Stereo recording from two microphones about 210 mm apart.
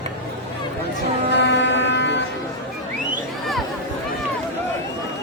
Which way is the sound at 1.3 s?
55° left (ahead or behind).